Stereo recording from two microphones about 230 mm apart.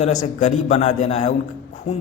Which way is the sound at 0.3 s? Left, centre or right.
Left.